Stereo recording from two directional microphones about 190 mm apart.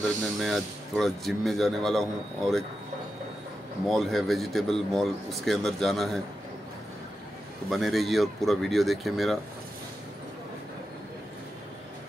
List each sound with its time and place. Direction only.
0.4 s speech: centre (ahead or behind)
3.8 s speech: centre (ahead or behind)
7.7 s speech: centre (ahead or behind)